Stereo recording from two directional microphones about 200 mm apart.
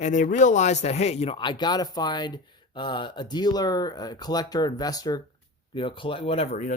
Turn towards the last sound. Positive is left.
turn(degrees=35)  # may be behind; listen again after turning